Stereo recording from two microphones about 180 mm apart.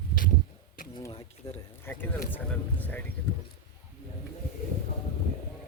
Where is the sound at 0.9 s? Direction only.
20° left (ahead or behind).